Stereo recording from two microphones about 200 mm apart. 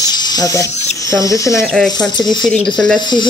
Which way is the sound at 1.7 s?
5° left (ahead or behind).